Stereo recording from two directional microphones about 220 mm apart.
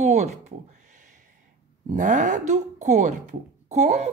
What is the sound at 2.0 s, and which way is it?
A woman's voice, 35° right (ahead or behind).